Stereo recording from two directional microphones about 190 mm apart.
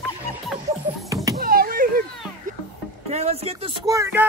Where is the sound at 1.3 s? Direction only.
50° right (ahead or behind).